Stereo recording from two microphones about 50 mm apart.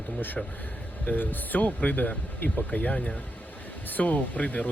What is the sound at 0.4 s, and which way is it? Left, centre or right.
Speech, centre.